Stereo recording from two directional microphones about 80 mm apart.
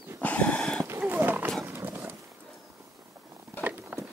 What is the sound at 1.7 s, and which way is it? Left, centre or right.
Horse, right.